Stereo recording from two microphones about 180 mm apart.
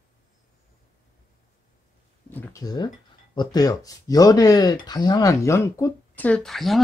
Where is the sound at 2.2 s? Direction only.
10° left (ahead or behind).